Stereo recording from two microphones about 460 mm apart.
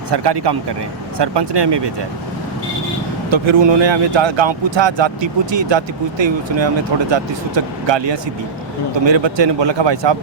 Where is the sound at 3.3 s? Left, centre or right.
Right.